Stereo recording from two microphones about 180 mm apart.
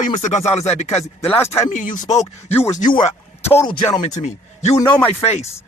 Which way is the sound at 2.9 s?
25° left (ahead or behind).